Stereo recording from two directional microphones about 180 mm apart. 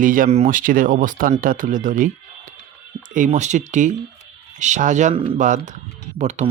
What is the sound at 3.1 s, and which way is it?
Speech, 45° right (ahead or behind).